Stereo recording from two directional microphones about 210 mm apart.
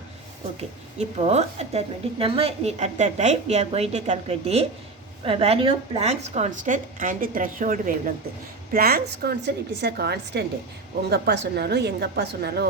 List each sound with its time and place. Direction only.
0.9 s a woman's voice: 30° right (ahead or behind); by 12.6 s 50° right (ahead or behind)